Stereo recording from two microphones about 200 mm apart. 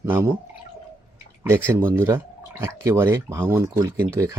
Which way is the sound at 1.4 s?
10° right (ahead or behind).